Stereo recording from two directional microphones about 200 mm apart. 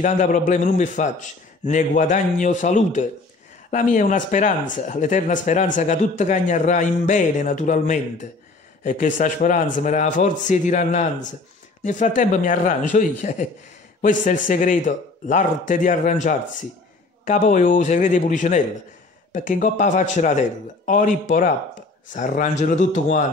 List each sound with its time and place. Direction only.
0.0 s speech: 40° left (ahead or behind)